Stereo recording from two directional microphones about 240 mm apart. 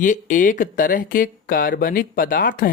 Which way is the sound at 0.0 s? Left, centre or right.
Left.